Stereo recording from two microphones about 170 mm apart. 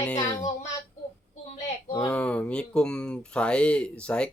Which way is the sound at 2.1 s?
5° left (ahead or behind).